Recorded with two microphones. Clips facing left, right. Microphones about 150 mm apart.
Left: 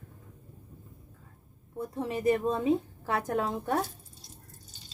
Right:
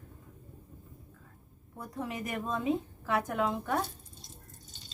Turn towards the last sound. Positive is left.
turn(degrees=35)  # may be behind; listen again after turning